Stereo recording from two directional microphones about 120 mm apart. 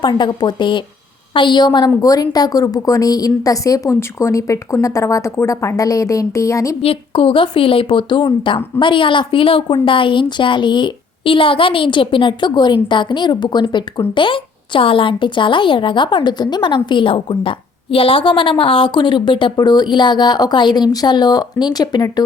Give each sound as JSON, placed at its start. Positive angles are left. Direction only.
{"t": 0.0, "sound": "a woman's voice", "side_deg": 40}
{"t": 6.8, "sound": "a woman's voice", "side_deg": 50}